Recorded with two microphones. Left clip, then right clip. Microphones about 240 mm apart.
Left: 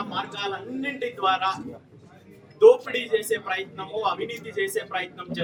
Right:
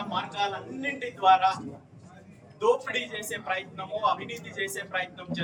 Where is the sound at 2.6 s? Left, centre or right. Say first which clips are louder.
Left 9 dB; centre.